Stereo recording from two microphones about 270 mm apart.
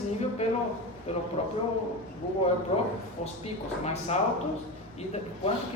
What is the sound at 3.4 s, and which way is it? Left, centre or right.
Speech, left.